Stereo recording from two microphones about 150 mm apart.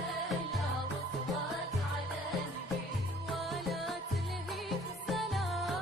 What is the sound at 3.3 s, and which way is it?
Music, centre (ahead or behind).